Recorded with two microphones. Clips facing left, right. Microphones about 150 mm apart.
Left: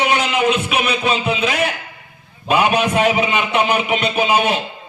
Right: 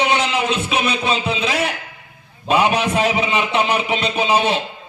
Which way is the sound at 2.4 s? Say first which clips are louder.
Left 1 dB; 30° right (ahead or behind).